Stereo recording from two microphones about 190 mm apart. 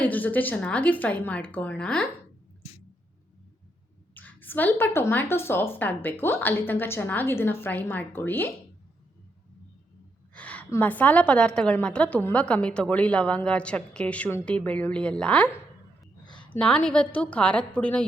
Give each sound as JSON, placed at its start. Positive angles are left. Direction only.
{"t": 0.0, "sound": "a woman's voice", "side_deg": 10}
{"t": 4.1, "sound": "a woman's voice", "side_deg": 10}
{"t": 10.3, "sound": "a woman's voice", "side_deg": 5}
{"t": 16.2, "sound": "a sound", "side_deg": 25}
{"t": 16.5, "sound": "a woman's voice", "side_deg": 5}